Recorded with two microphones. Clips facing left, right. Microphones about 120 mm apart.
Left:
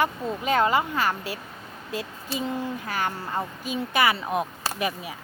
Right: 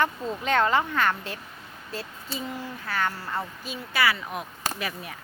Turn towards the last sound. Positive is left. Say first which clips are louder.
# left 6 dB
turn(degrees=30)  # may be behind; listen again after turning